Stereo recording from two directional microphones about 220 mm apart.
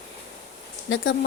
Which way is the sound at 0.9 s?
60° left (ahead or behind).